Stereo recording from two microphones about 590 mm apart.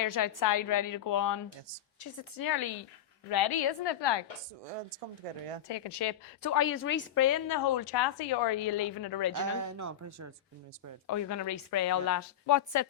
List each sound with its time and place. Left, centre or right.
0.0 s a woman's voice: left
5.6 s a woman's voice: left
6.4 s a woman's voice: left
7.4 s a woman's voice: left
9.6 s speech: right
11.0 s a woman's voice: left